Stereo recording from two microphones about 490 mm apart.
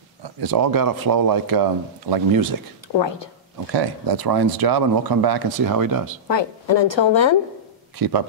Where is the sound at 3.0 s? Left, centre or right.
Left.